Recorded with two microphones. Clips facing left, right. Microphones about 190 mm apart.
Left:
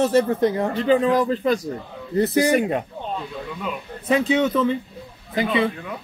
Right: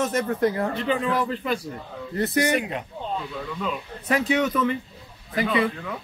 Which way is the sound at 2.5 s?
45° left (ahead or behind).